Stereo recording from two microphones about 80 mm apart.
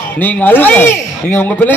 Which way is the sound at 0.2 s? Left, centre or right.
Left.